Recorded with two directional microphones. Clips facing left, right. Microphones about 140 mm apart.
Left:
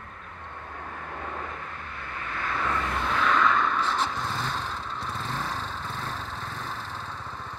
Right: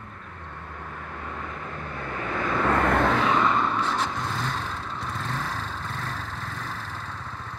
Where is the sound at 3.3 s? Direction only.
25° right (ahead or behind).